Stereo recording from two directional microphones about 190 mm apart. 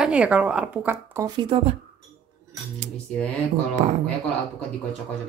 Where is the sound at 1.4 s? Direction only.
30° right (ahead or behind).